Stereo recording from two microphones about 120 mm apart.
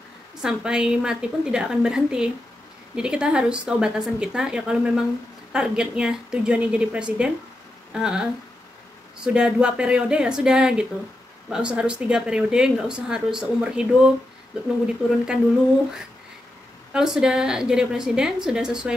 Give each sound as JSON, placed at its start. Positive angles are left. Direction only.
{"t": 0.4, "sound": "a woman's voice", "side_deg": -5}
{"t": 16.9, "sound": "a woman's voice", "side_deg": -5}